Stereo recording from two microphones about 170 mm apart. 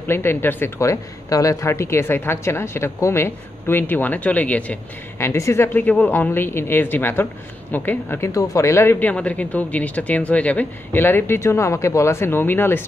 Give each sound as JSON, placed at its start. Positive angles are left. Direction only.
{"t": 0.0, "sound": "a woman's voice", "side_deg": 15}